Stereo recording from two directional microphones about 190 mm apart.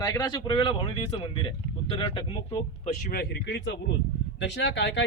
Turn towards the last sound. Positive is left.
turn(degrees=70)  # may be behind; listen again after turning